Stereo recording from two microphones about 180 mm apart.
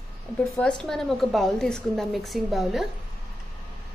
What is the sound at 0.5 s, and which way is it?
A woman's voice, 5° left (ahead or behind).